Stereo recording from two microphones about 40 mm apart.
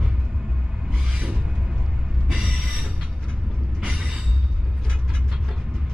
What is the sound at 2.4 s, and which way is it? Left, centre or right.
Music, right.